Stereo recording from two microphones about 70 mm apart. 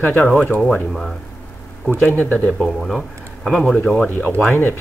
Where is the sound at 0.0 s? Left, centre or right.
Left.